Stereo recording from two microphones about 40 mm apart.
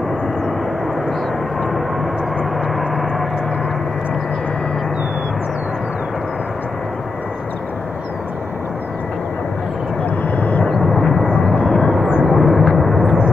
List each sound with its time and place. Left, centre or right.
2.7 s vehicle: centre
10.0 s vehicle: left
10.8 s vehicle: centre
11.2 s vehicle: left
12.3 s vehicle: centre
12.9 s vehicle: centre